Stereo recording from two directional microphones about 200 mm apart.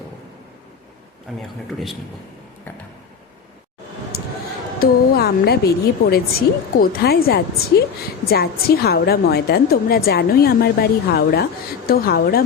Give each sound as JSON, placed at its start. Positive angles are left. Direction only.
{"t": 1.4, "sound": "speech", "side_deg": 0}
{"t": 4.1, "sound": "basketball bounce", "side_deg": 50}
{"t": 4.8, "sound": "a woman's voice", "side_deg": 50}